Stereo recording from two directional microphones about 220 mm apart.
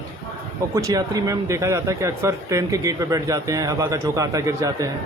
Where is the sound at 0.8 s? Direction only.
15° right (ahead or behind).